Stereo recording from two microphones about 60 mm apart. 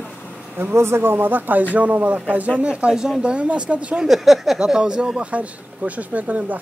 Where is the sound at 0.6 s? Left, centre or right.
Right.